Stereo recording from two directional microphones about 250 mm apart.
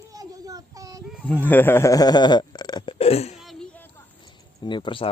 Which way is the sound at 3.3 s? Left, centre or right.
Centre.